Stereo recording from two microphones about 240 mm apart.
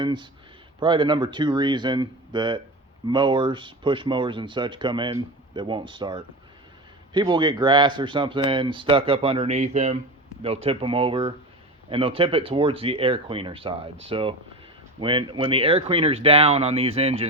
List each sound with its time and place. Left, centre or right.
0.0 s speech: centre